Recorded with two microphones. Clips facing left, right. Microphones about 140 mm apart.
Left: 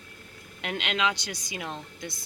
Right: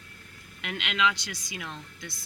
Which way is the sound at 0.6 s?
40° left (ahead or behind).